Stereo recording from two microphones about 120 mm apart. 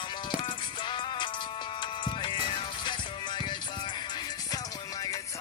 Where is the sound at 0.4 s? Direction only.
40° left (ahead or behind).